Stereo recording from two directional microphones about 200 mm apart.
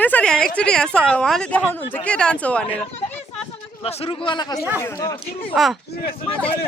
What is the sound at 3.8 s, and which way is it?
Speech, 30° left (ahead or behind).